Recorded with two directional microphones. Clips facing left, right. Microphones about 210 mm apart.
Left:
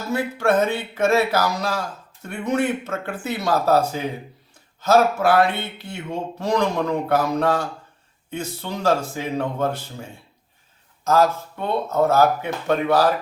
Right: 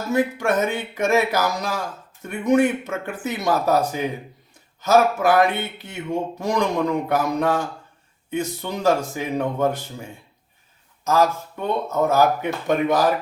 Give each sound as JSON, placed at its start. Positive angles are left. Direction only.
{"t": 0.1, "sound": "speech", "side_deg": -15}
{"t": 11.9, "sound": "speech", "side_deg": -15}